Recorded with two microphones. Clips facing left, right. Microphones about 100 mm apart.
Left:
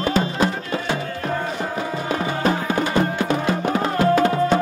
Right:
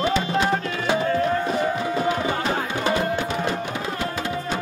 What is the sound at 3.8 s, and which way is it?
Music, 50° left (ahead or behind).